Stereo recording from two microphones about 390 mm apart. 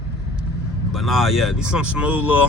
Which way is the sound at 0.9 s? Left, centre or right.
Centre.